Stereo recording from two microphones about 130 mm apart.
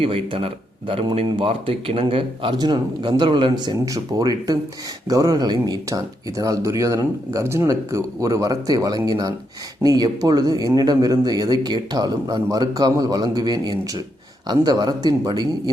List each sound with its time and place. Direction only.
0.0 s speech: 45° right (ahead or behind)